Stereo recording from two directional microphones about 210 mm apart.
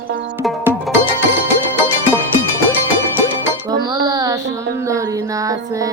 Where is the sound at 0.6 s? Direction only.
10° right (ahead or behind).